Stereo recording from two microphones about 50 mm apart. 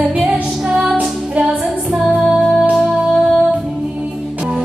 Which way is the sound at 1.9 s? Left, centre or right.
Centre.